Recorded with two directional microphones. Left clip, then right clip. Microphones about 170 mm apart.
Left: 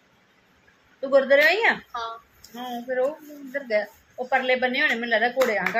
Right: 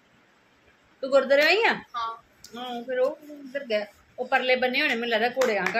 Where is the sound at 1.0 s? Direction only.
10° right (ahead or behind).